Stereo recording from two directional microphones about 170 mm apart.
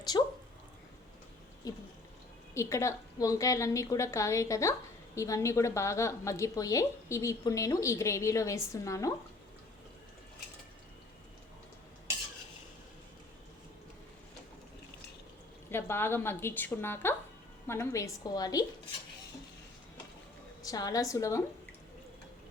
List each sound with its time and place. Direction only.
0.1 s a sound: 20° left (ahead or behind)
1.6 s a woman's voice: 20° left (ahead or behind)
15.7 s a woman's voice: 15° left (ahead or behind)
20.6 s a woman's voice: 20° left (ahead or behind)